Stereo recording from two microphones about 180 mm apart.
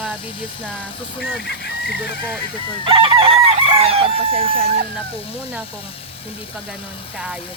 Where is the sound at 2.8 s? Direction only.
30° right (ahead or behind).